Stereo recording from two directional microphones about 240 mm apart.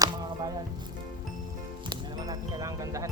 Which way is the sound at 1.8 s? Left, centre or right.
Centre.